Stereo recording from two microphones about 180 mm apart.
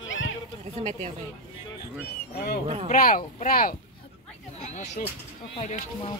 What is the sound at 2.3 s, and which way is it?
Speech, 60° left (ahead or behind).